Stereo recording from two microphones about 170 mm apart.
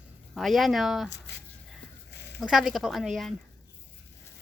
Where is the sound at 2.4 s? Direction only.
5° right (ahead or behind).